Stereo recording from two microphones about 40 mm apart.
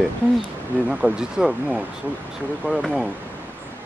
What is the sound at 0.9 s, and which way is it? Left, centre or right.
Speech, right.